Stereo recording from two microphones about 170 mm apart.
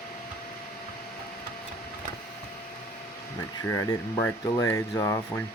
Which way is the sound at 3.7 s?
15° left (ahead or behind).